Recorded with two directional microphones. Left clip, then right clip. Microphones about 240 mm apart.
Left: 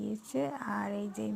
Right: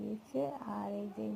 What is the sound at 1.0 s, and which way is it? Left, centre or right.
Speech, centre.